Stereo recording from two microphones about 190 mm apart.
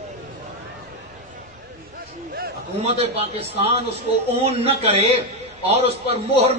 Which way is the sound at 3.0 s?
35° right (ahead or behind).